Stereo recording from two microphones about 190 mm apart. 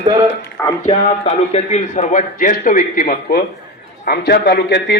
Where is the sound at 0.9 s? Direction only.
35° left (ahead or behind).